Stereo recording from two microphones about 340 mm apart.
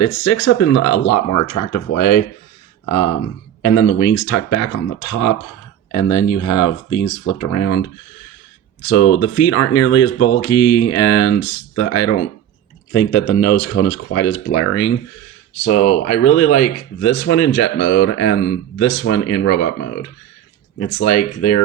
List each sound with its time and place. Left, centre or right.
0.0 s speech: left
3.6 s speech: left
8.9 s speech: left